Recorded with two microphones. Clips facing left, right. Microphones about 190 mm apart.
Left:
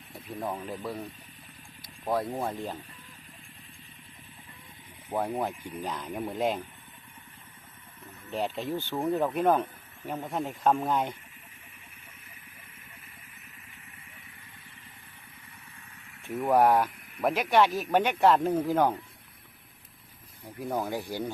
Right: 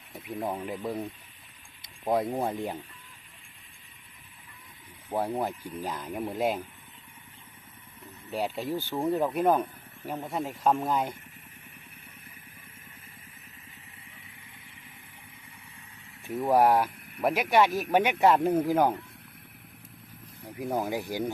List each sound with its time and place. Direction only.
0.2 s speech: 10° right (ahead or behind)
2.0 s speech: 15° right (ahead or behind)
5.4 s speech: 5° right (ahead or behind)
8.3 s speech: centre (ahead or behind)
16.5 s speech: 10° right (ahead or behind)
20.4 s speech: 10° right (ahead or behind)